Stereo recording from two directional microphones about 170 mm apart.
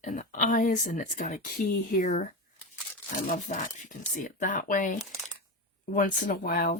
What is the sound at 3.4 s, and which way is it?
Speech, 50° left (ahead or behind).